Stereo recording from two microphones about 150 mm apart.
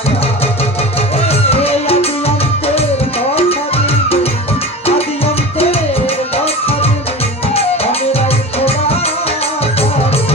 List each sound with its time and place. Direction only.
1.3 s music: 40° left (ahead or behind)
3.3 s music: 40° left (ahead or behind)
8.1 s music: 40° left (ahead or behind)